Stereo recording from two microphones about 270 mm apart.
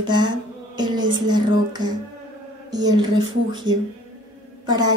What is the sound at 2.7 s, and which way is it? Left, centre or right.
Speech, centre.